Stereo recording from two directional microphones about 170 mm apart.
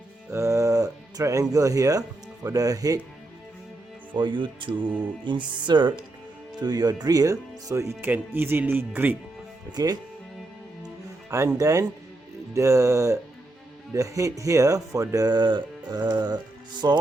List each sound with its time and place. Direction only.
0.3 s speech: 15° right (ahead or behind)
4.1 s speech: 30° right (ahead or behind); by 9.1 s 10° right (ahead or behind)
9.7 s speech: 20° right (ahead or behind)
11.3 s speech: 20° right (ahead or behind)